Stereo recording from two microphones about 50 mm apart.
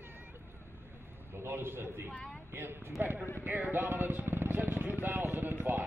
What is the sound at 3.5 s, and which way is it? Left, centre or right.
Speech, right.